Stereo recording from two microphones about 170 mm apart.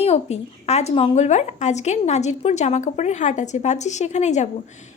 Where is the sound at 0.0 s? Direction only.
40° left (ahead or behind).